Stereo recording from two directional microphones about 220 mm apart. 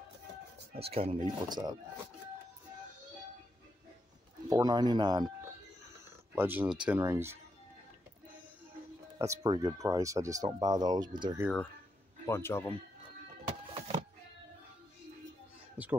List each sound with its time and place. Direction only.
0.7 s speech: 25° right (ahead or behind)
4.5 s speech: 20° right (ahead or behind)
6.3 s speech: 10° right (ahead or behind)
9.2 s speech: 15° right (ahead or behind)
12.3 s speech: 10° left (ahead or behind)
13.7 s a sound: 25° right (ahead or behind)
15.8 s a sound: 5° right (ahead or behind)